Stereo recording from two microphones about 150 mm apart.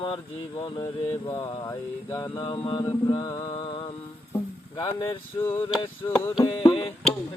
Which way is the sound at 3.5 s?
35° left (ahead or behind).